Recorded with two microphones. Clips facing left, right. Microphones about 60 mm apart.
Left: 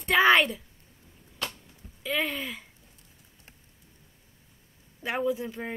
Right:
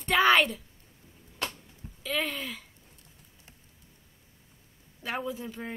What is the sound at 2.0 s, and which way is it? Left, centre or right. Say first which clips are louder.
Speech: left 2 dB; centre.